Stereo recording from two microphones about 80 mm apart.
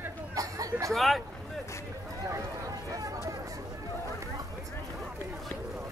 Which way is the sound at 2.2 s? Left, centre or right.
Right.